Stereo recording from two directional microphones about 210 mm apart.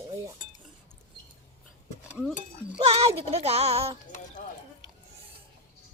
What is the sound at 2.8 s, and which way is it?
Speech, 30° right (ahead or behind).